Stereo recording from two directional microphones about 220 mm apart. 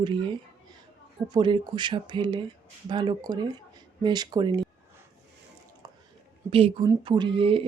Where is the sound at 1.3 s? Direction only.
20° right (ahead or behind).